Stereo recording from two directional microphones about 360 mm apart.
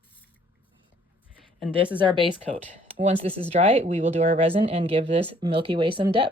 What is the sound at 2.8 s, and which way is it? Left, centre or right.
Speech, centre.